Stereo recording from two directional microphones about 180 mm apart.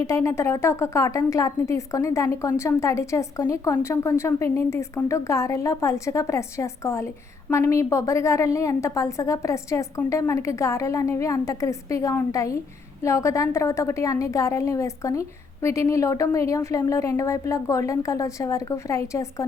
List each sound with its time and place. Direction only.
0.0 s a woman's voice: 15° left (ahead or behind)